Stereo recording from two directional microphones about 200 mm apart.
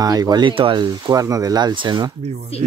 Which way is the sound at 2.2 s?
35° right (ahead or behind).